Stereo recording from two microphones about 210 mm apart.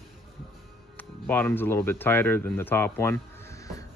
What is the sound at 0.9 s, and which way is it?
Speech, 10° left (ahead or behind).